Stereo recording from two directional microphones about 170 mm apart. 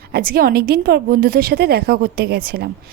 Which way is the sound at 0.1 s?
60° right (ahead or behind).